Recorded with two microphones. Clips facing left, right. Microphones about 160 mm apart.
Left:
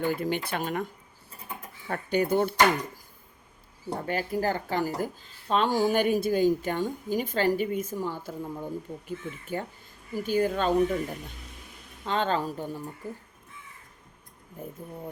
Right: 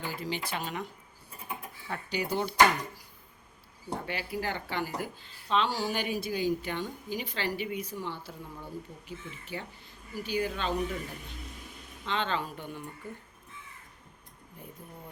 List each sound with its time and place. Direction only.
0.0 s speech: 55° left (ahead or behind)
1.9 s speech: 50° left (ahead or behind)
4.0 s speech: 45° left (ahead or behind)
12.0 s speech: 45° left (ahead or behind)
14.6 s speech: 45° left (ahead or behind)